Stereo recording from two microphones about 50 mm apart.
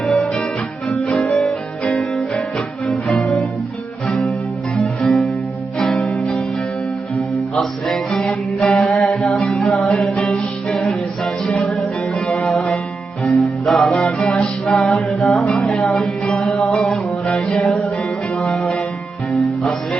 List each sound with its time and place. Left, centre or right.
0.0 s music: centre
4.7 s music: centre
7.5 s music: centre
8.7 s music: centre
12.5 s music: centre
14.0 s music: centre
17.3 s music: left